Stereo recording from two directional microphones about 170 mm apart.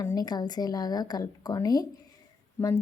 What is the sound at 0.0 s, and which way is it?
Speech, 25° left (ahead or behind).